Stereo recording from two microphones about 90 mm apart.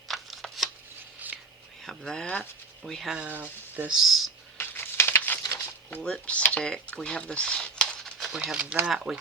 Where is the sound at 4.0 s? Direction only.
Centre (ahead or behind).